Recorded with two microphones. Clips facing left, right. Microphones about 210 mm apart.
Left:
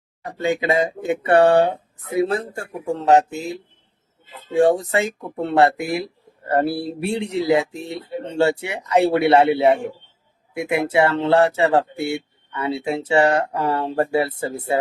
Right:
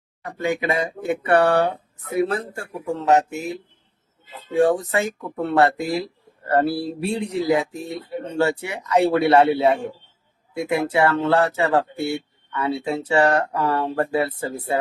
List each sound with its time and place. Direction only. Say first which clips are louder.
0.4 s speech: left 3 dB; 20° left (ahead or behind)
4.5 s speech: left 2 dB; 25° left (ahead or behind)